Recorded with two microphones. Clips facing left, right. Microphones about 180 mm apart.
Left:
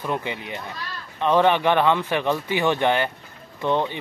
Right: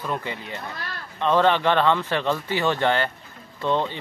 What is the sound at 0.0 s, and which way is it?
Speech, 20° left (ahead or behind).